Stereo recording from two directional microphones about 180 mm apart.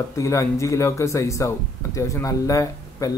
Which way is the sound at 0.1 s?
15° left (ahead or behind).